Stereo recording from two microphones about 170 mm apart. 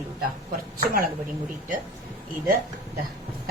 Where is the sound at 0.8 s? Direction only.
60° right (ahead or behind).